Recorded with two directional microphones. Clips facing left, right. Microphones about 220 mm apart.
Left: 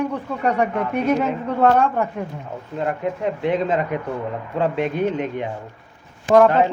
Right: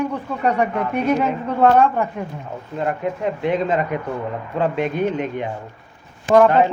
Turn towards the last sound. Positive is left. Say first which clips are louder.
# right 1 dB
turn(degrees=30)  # may be behind; listen again after turning